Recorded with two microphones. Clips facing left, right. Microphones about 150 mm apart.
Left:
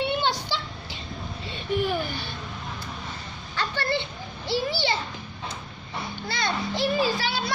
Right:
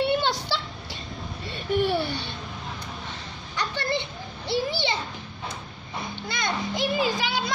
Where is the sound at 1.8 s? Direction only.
35° right (ahead or behind).